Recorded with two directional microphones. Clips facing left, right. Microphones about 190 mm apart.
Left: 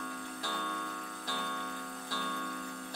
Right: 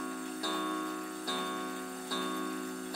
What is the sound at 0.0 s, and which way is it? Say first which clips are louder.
Music: right 4 dB; 30° right (ahead or behind).